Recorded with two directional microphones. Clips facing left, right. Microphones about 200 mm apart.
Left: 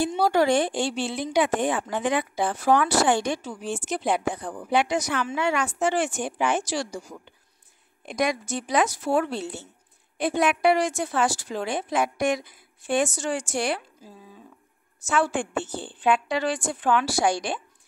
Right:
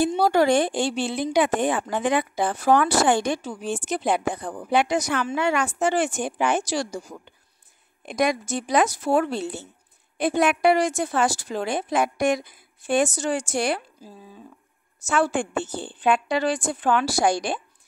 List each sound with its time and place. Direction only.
0.1 s a woman's voice: 45° right (ahead or behind)
8.0 s a woman's voice: 45° right (ahead or behind)
15.0 s a woman's voice: 40° right (ahead or behind)